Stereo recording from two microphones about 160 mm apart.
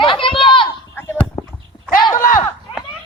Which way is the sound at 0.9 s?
10° left (ahead or behind).